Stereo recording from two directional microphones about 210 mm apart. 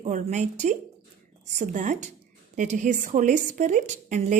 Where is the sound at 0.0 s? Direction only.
35° right (ahead or behind).